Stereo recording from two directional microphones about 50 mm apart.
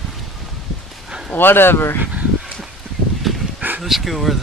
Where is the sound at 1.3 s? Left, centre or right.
Left.